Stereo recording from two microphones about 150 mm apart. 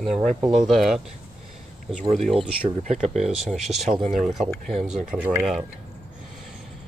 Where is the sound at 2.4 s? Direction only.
45° right (ahead or behind).